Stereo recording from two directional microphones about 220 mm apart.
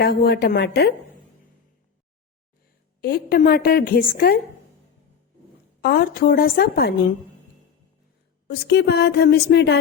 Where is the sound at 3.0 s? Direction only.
45° left (ahead or behind).